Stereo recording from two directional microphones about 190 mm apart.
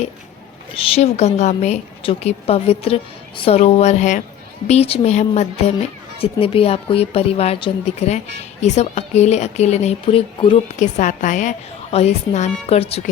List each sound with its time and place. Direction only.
0.7 s a woman's voice: 30° left (ahead or behind)
10.8 s a woman's voice: 40° left (ahead or behind)